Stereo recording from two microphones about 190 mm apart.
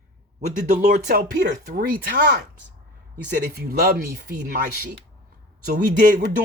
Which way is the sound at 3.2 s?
40° right (ahead or behind).